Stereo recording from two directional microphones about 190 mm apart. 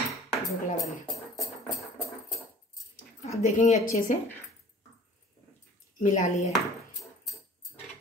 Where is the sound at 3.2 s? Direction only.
40° left (ahead or behind).